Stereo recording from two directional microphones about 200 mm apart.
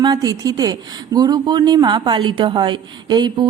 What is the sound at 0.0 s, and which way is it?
A woman's voice, 20° right (ahead or behind).